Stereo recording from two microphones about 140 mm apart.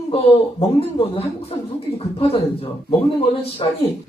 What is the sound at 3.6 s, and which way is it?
Speech, 35° left (ahead or behind).